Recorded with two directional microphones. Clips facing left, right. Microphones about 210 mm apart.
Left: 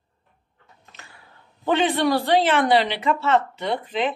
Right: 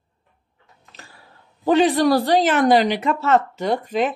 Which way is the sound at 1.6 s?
40° right (ahead or behind).